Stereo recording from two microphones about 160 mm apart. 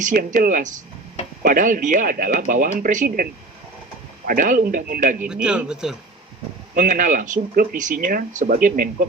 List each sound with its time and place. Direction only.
0.0 s speech: 55° right (ahead or behind)
4.3 s speech: 55° right (ahead or behind)
5.2 s speech: 5° right (ahead or behind)
6.7 s speech: 55° right (ahead or behind)